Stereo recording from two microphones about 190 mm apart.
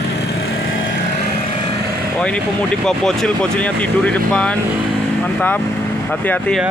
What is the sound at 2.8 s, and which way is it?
Speech, centre (ahead or behind).